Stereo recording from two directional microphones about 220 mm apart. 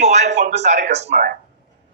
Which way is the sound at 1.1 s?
40° right (ahead or behind).